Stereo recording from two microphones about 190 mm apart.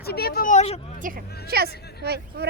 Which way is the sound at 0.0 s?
55° left (ahead or behind).